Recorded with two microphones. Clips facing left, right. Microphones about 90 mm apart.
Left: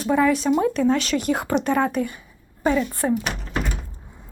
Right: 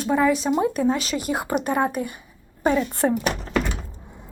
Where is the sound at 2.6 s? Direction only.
25° right (ahead or behind).